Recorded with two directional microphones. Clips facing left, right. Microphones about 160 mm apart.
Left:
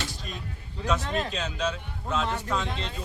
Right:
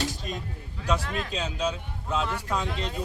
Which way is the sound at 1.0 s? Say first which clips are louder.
Left 3 dB; 30° left (ahead or behind).